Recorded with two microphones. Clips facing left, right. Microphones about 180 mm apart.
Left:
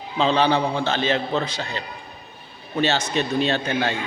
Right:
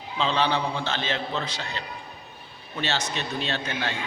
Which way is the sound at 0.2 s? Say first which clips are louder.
Left 6 dB; 45° left (ahead or behind).